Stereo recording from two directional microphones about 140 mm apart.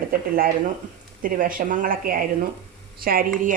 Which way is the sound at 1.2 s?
80° right.